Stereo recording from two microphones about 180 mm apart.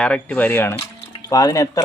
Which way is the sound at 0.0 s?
5° left (ahead or behind).